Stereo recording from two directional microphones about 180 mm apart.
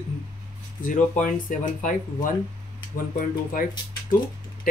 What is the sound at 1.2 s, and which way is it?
Speech, 45° left (ahead or behind).